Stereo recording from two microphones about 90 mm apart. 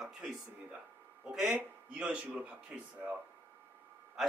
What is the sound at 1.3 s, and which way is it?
Speech, 10° right (ahead or behind).